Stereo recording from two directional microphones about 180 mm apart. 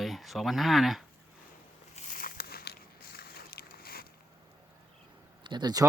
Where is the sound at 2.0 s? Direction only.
50° left (ahead or behind).